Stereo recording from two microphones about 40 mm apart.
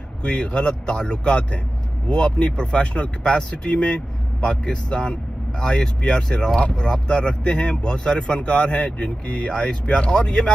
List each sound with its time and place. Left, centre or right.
0.2 s speech: left